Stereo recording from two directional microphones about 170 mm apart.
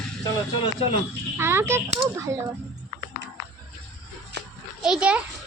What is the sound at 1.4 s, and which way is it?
Speech, 15° right (ahead or behind).